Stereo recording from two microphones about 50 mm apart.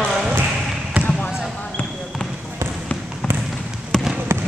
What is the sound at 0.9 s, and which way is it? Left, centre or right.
Basketball bounce, right.